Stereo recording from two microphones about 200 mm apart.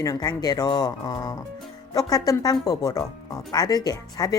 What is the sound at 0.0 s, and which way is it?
Speech, 15° left (ahead or behind).